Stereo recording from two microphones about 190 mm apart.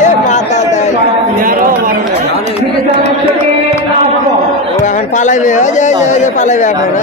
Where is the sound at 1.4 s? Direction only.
45° right (ahead or behind).